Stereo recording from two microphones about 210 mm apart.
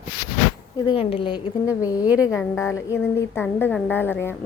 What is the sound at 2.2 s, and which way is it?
A woman's voice, 15° left (ahead or behind).